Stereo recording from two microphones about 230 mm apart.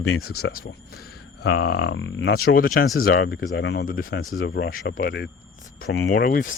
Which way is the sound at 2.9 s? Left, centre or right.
Left.